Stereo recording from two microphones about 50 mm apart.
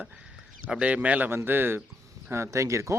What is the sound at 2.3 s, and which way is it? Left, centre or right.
Speech, right.